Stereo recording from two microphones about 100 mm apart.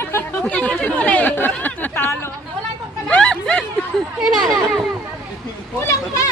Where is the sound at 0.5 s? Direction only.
10° left (ahead or behind).